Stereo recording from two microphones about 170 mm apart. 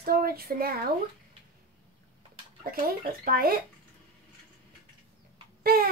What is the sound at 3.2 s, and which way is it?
Speech, 60° right (ahead or behind).